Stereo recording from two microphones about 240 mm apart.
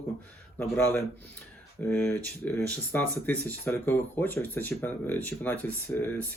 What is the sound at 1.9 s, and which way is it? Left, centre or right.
Speech, centre.